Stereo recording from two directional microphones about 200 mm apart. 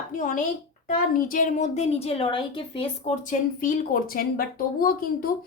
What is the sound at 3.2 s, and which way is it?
A woman's voice, 40° left (ahead or behind).